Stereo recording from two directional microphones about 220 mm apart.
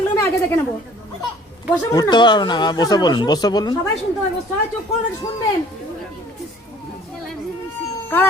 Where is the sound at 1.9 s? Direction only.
20° left (ahead or behind).